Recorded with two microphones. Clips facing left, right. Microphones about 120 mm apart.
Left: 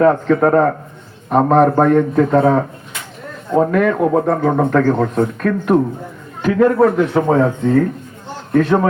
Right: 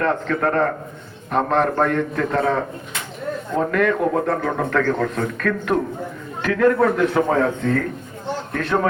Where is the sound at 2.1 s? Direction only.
25° left (ahead or behind).